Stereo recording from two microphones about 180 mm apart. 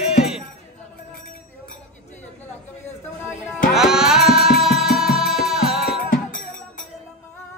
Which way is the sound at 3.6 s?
Centre (ahead or behind).